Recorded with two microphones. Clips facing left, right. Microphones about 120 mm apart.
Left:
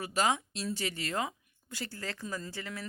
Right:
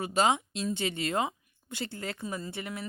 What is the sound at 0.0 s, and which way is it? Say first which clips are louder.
A woman's voice: right 4 dB; 25° right (ahead or behind).